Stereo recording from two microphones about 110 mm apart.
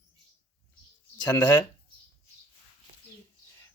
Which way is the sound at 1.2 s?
15° left (ahead or behind).